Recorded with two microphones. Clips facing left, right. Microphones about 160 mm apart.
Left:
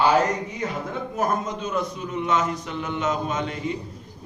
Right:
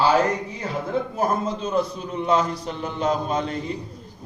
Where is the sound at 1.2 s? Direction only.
30° right (ahead or behind).